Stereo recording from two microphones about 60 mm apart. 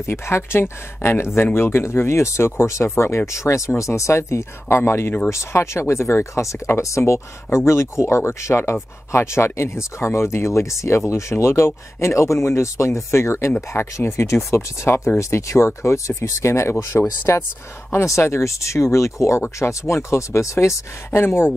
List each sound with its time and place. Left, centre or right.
0.0 s speech: left
16.9 s speech: left
17.9 s speech: left